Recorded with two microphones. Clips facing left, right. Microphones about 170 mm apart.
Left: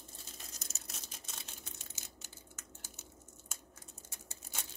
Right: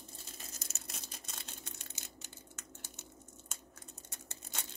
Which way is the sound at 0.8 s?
Centre (ahead or behind).